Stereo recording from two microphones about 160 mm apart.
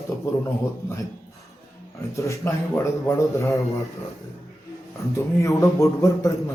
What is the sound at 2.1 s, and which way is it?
A man's voice, 20° left (ahead or behind).